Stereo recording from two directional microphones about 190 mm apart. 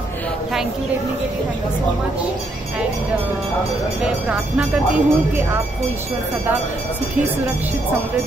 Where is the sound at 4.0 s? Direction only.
5° right (ahead or behind).